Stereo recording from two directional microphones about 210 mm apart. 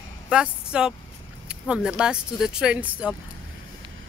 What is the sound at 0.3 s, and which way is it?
Speech, 5° right (ahead or behind).